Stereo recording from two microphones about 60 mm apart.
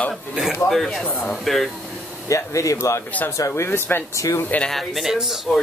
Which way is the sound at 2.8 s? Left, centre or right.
Left.